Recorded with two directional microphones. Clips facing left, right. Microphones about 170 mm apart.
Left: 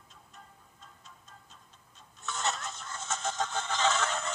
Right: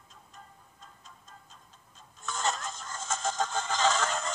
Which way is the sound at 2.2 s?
45° right (ahead or behind).